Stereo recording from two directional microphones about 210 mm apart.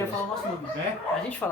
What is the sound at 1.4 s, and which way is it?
Speech, 10° left (ahead or behind).